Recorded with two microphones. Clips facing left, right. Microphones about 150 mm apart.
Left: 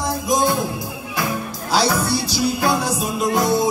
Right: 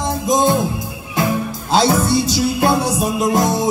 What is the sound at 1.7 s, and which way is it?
Music, 25° right (ahead or behind).